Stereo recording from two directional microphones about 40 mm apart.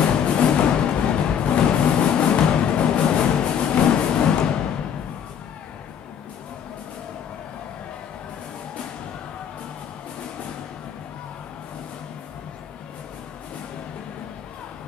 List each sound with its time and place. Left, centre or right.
0.0 s music: left